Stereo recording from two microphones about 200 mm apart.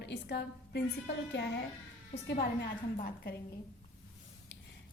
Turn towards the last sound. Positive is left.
turn(degrees=50)  # may be behind; listen again after turning